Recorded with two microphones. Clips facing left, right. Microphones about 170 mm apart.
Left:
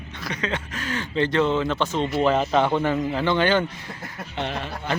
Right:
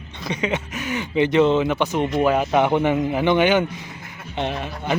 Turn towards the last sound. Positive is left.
turn(degrees=-15)  # may be behind; listen again after turning